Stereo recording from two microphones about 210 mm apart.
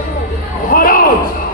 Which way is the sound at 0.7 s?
45° left (ahead or behind).